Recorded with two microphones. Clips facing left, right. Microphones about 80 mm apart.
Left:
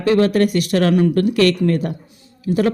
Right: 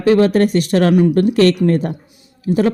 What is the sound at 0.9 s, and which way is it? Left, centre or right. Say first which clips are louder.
A woman's voice: right 3 dB; centre.